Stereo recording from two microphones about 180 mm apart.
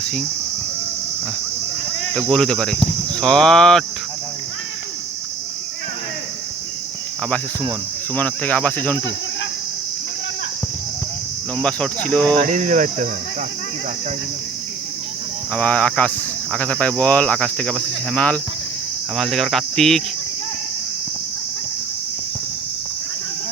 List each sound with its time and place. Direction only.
0.0 s speech: 5° left (ahead or behind)
2.1 s speech: 5° left (ahead or behind)
8.1 s speech: 10° left (ahead or behind)
11.5 s speech: 5° left (ahead or behind)
12.4 s cricket: 45° right (ahead or behind)
15.5 s speech: 5° left (ahead or behind)